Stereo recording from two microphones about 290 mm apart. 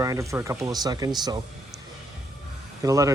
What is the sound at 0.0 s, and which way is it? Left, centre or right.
Speech, centre.